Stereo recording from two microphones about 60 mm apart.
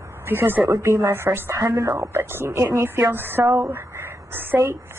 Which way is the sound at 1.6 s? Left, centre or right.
Right.